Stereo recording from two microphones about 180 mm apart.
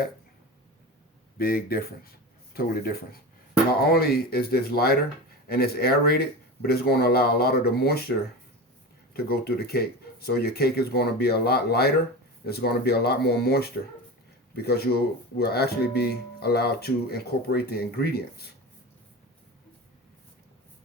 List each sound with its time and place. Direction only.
1.4 s speech: 55° left (ahead or behind)
9.1 s speech: 60° left (ahead or behind)